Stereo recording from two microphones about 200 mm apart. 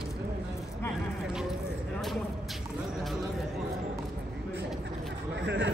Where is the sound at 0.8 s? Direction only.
10° left (ahead or behind).